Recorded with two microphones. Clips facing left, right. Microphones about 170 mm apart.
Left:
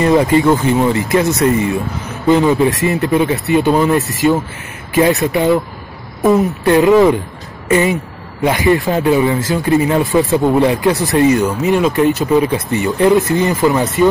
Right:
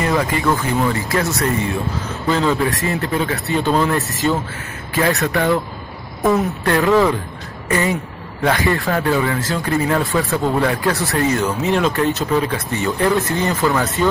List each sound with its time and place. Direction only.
0.0 s speech: 25° left (ahead or behind)